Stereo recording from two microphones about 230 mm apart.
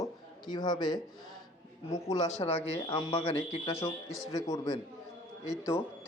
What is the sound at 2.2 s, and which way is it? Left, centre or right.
Speech, left.